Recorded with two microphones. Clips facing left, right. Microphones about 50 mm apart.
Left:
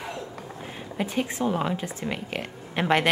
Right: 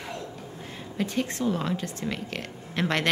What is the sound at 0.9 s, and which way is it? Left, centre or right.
A woman's voice, centre.